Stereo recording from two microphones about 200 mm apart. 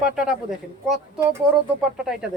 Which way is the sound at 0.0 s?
5° right (ahead or behind).